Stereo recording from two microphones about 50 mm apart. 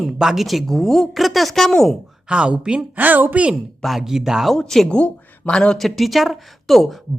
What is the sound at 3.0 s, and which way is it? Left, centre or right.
Speech, right.